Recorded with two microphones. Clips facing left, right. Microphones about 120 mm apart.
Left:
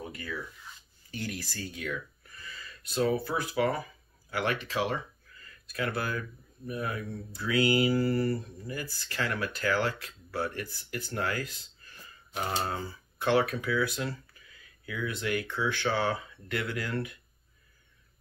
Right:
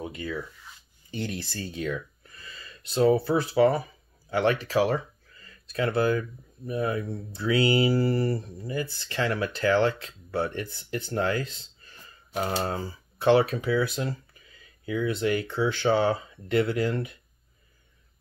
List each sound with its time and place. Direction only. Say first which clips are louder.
0.0 s speech: right 5 dB; 25° right (ahead or behind)
12.4 s speech: right 4 dB; 35° right (ahead or behind)